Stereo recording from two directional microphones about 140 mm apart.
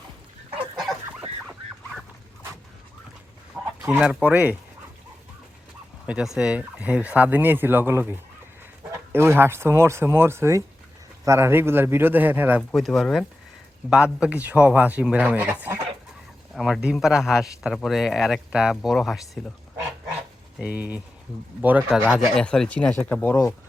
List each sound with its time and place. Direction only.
3.8 s speech: 5° right (ahead or behind)
6.1 s speech: 5° right (ahead or behind)
12.7 s speech: centre (ahead or behind)
20.6 s speech: 10° right (ahead or behind); by 23.6 s 15° left (ahead or behind)